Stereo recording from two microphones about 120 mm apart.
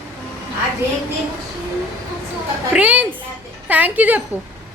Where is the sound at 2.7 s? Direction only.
15° right (ahead or behind).